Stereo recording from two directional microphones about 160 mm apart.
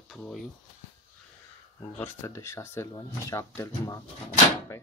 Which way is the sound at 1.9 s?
15° left (ahead or behind).